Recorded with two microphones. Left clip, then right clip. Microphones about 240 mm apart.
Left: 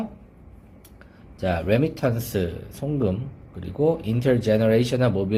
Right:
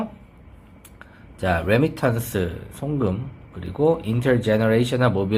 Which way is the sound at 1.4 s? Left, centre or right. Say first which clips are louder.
Right 2 dB; centre.